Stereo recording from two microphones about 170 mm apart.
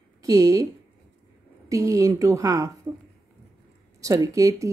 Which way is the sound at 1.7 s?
20° right (ahead or behind).